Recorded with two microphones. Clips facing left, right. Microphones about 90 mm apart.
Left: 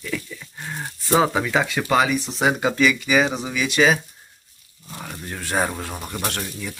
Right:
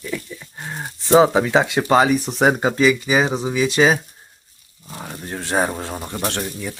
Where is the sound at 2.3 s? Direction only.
50° right (ahead or behind).